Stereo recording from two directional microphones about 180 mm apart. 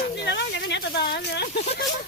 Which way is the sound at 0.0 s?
70° left (ahead or behind).